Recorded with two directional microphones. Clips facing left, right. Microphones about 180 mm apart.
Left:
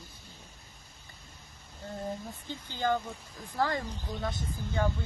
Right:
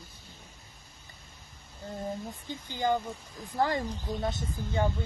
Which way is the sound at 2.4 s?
15° right (ahead or behind).